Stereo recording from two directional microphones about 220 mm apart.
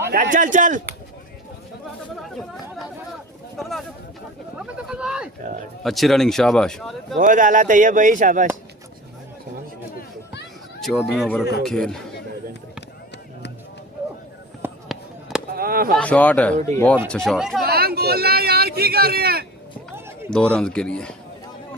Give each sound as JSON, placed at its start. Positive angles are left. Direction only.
{"t": 0.0, "sound": "speech", "side_deg": -40}
{"t": 3.6, "sound": "speech", "side_deg": 0}
{"t": 7.2, "sound": "speech", "side_deg": -35}
{"t": 10.8, "sound": "speech", "side_deg": 0}
{"t": 14.6, "sound": "fireworks", "side_deg": -5}
{"t": 15.5, "sound": "chop", "side_deg": -40}
{"t": 16.0, "sound": "a man's voice", "side_deg": 5}
{"t": 17.7, "sound": "speech", "side_deg": -45}
{"t": 20.3, "sound": "speech", "side_deg": 5}